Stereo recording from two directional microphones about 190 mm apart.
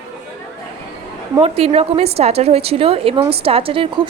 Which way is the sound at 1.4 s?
30° right (ahead or behind).